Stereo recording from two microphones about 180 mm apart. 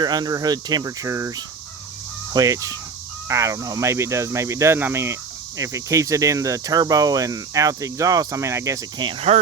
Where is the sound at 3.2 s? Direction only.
15° right (ahead or behind).